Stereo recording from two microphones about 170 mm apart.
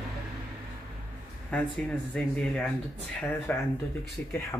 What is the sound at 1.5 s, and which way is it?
Speech, 5° left (ahead or behind).